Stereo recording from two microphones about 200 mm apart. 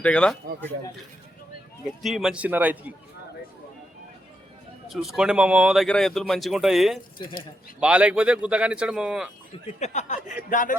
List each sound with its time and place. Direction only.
0.0 s speech: 5° left (ahead or behind)
2.0 s a man's voice: centre (ahead or behind)
4.9 s speech: centre (ahead or behind)
9.6 s speech: 35° left (ahead or behind)